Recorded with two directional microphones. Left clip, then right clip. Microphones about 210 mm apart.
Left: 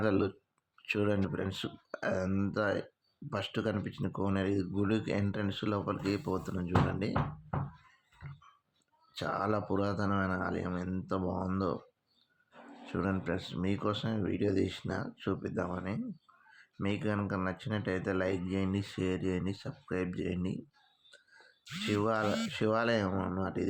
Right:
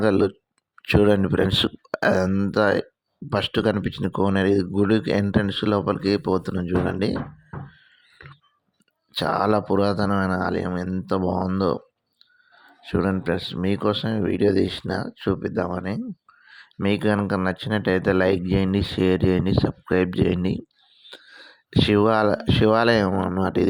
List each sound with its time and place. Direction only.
0.0 s speech: 35° right (ahead or behind)
9.1 s speech: 40° right (ahead or behind)
12.8 s speech: 40° right (ahead or behind)